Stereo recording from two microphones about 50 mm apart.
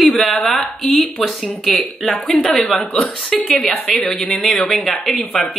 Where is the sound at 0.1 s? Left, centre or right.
Centre.